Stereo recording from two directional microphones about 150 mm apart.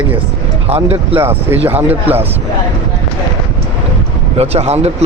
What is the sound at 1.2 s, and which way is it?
A man's voice, 15° right (ahead or behind).